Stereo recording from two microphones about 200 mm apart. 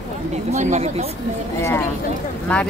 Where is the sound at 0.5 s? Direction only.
35° right (ahead or behind).